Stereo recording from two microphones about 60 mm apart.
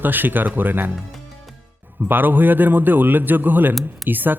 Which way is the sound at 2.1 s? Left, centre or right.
Right.